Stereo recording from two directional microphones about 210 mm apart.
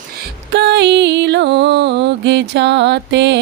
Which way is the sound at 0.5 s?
55° right (ahead or behind).